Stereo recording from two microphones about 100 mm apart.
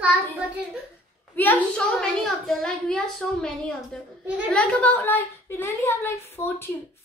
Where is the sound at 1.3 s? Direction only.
15° left (ahead or behind).